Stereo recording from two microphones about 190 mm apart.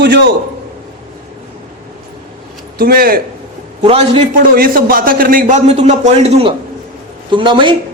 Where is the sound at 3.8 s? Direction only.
30° right (ahead or behind).